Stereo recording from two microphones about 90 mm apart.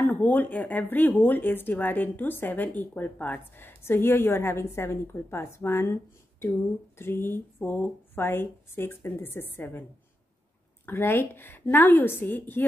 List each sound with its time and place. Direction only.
0.0 s speech: 20° left (ahead or behind)
7.0 s speech: 25° left (ahead or behind)
10.9 s speech: 25° left (ahead or behind)